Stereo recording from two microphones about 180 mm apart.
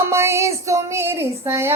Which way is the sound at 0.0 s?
15° right (ahead or behind).